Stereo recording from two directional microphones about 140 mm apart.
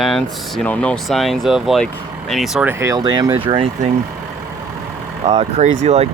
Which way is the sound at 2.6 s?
20° right (ahead or behind).